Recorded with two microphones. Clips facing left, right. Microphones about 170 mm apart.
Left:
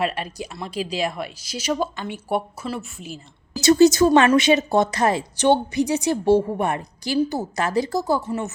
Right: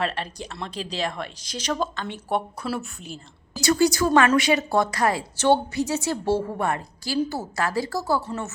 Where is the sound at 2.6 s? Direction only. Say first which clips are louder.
Even; 5° right (ahead or behind).